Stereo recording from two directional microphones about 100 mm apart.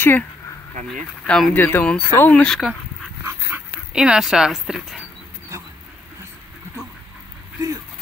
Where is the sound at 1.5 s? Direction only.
20° left (ahead or behind).